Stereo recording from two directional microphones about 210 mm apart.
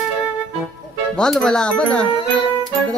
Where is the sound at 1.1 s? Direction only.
5° left (ahead or behind).